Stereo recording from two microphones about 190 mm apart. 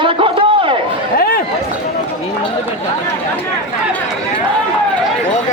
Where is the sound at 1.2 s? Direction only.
50° left (ahead or behind).